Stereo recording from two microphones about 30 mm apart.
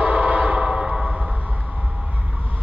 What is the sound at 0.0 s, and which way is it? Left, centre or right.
Train, right.